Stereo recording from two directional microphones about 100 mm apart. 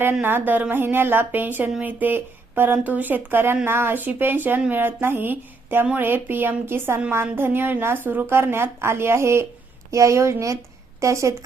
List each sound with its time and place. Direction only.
0.0 s speech: 20° right (ahead or behind)